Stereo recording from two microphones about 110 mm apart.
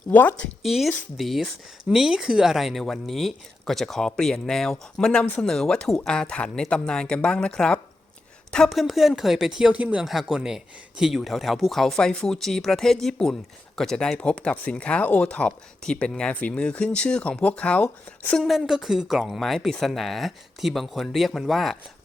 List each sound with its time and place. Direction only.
0.1 s speech: 15° left (ahead or behind)
0.6 s speech: centre (ahead or behind)
18.3 s speech: centre (ahead or behind)